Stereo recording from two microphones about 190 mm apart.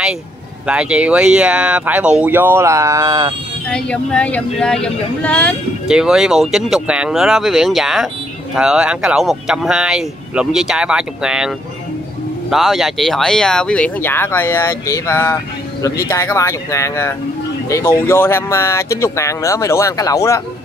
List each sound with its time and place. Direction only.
0.7 s speech: 5° right (ahead or behind)
3.7 s speech: 5° left (ahead or behind)